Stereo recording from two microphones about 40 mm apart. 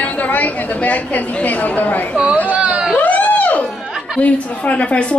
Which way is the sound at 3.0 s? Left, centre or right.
Left.